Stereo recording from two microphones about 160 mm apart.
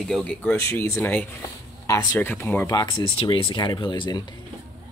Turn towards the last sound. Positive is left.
turn(degrees=30)  # may be behind; listen again after turning